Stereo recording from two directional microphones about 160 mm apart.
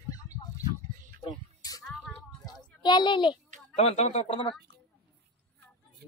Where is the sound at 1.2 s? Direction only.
20° left (ahead or behind).